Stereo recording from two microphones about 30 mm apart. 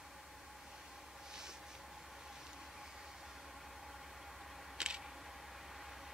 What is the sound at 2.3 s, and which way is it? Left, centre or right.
Vehicle, centre.